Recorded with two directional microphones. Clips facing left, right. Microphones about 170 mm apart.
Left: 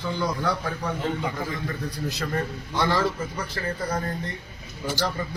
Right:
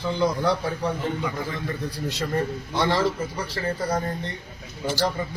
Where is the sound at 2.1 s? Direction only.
30° right (ahead or behind).